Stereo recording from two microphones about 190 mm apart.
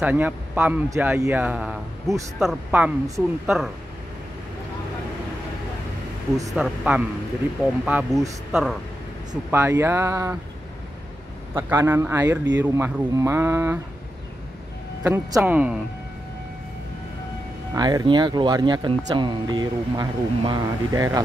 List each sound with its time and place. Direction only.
0.0 s a man's voice: 10° right (ahead or behind)
6.5 s a man's voice: 5° right (ahead or behind)
11.5 s a man's voice: 15° right (ahead or behind)
15.0 s a man's voice: 10° right (ahead or behind)
17.7 s speech: 20° right (ahead or behind)